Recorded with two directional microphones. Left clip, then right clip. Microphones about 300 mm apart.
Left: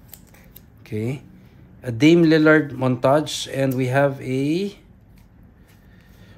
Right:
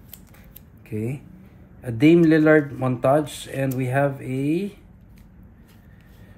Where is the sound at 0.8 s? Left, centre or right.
Centre.